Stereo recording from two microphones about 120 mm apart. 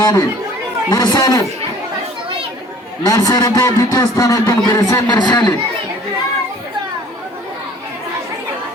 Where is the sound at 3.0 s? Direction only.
30° left (ahead or behind).